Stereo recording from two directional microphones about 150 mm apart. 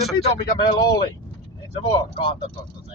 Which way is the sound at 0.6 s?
30° left (ahead or behind).